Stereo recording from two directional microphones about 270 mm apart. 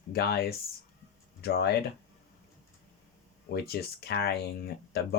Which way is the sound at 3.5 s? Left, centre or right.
Left.